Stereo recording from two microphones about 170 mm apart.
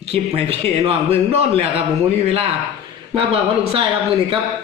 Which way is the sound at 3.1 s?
35° right (ahead or behind).